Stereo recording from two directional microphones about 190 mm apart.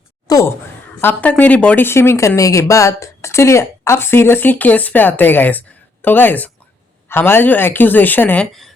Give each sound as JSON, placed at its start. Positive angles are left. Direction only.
{"t": 0.3, "sound": "speech", "side_deg": 20}